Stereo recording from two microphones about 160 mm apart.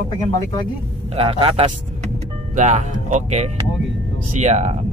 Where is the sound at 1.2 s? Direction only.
35° right (ahead or behind).